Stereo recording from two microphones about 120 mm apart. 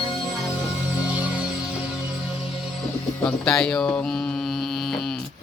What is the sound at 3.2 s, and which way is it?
Speech, 5° left (ahead or behind).